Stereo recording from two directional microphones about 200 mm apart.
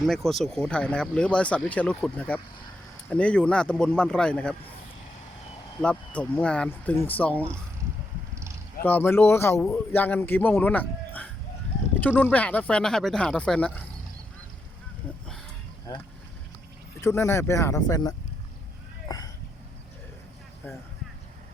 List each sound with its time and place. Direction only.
0.0 s speech: centre (ahead or behind)
5.8 s a man's voice: 5° left (ahead or behind)
8.8 s a man's voice: 10° left (ahead or behind)
17.0 s a man's voice: 15° left (ahead or behind)
19.0 s a sound: 20° left (ahead or behind)